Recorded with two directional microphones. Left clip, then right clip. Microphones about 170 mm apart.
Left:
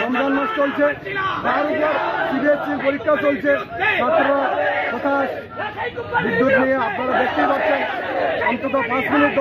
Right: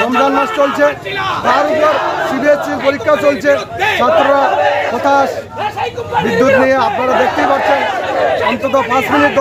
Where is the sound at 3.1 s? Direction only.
35° right (ahead or behind).